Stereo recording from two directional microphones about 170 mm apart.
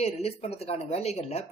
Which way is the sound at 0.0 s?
35° left (ahead or behind).